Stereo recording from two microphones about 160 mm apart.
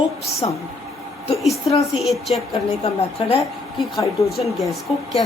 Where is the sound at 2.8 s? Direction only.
35° left (ahead or behind).